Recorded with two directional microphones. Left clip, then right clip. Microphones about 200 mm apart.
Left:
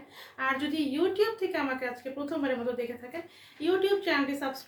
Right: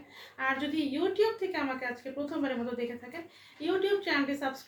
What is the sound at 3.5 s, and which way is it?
A woman's voice, 15° left (ahead or behind).